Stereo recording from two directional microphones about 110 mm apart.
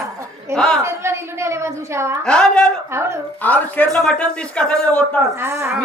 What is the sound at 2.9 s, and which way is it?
Speech, 25° right (ahead or behind).